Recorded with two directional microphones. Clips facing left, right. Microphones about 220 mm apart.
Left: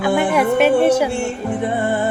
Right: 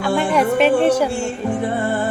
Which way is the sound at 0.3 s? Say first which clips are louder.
Even; 10° left (ahead or behind).